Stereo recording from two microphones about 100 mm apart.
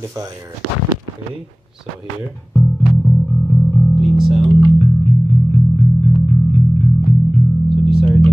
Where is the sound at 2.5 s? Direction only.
Centre (ahead or behind).